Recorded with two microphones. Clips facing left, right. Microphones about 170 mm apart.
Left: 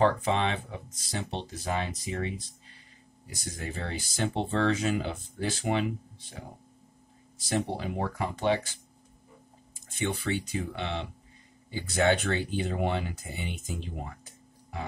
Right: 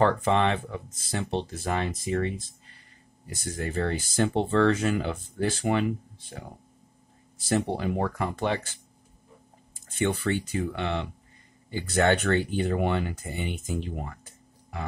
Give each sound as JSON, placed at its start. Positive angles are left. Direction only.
{"t": 0.0, "sound": "speech", "side_deg": -55}
{"t": 7.4, "sound": "speech", "side_deg": -55}
{"t": 9.9, "sound": "speech", "side_deg": -55}